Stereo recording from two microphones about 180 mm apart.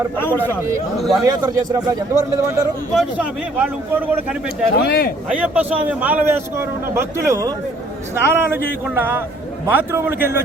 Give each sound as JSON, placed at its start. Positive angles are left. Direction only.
{"t": 0.2, "sound": "a man's voice", "side_deg": 10}
{"t": 1.2, "sound": "speech", "side_deg": -20}
{"t": 2.9, "sound": "a man's voice", "side_deg": -5}
{"t": 4.4, "sound": "speech", "side_deg": 60}
{"t": 5.3, "sound": "a man's voice", "side_deg": -10}